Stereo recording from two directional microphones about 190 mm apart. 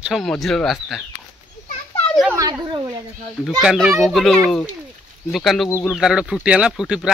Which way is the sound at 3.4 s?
Centre (ahead or behind).